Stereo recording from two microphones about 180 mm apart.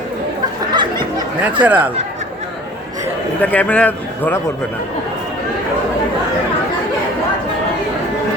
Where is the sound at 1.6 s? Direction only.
10° right (ahead or behind).